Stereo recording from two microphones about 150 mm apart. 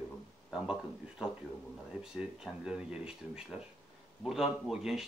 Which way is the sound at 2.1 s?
5° right (ahead or behind).